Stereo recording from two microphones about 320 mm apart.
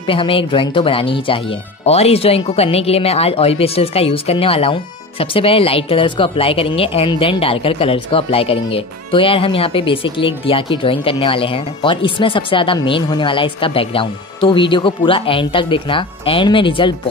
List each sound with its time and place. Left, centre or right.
0.0 s speech: centre